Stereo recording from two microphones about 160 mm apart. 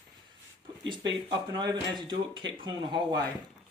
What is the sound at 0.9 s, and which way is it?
Speech, 30° right (ahead or behind).